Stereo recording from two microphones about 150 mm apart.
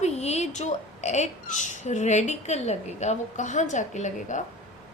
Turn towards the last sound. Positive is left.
turn(degrees=55)  # may be behind; listen again after turning